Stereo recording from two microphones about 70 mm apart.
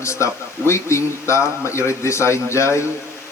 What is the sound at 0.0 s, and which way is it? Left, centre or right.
Speech, left.